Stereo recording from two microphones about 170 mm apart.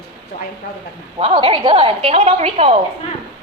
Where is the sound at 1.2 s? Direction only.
30° right (ahead or behind).